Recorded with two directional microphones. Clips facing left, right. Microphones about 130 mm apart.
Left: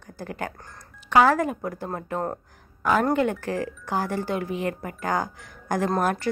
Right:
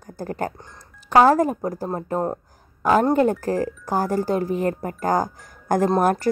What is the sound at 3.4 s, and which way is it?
Speech, 40° right (ahead or behind).